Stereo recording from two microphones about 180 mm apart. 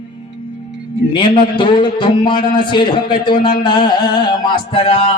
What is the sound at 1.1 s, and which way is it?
Music, 25° left (ahead or behind).